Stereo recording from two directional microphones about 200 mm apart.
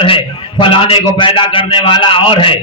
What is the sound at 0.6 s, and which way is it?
A man's voice, 25° left (ahead or behind).